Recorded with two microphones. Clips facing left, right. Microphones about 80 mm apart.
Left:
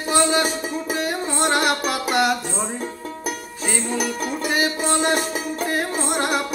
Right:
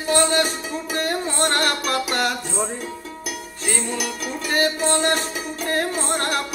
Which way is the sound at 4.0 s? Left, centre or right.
Left.